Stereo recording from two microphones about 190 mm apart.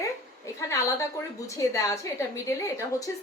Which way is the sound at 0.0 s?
15° left (ahead or behind).